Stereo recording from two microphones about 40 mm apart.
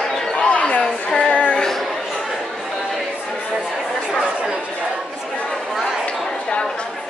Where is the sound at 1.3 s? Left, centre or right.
Left.